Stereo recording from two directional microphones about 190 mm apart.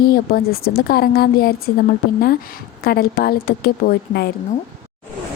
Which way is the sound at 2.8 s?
55° left (ahead or behind).